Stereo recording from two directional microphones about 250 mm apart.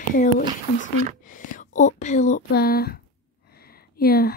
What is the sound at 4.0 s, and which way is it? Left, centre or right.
Speech, left.